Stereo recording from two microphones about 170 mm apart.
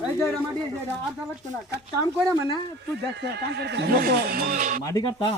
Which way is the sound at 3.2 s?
80° right.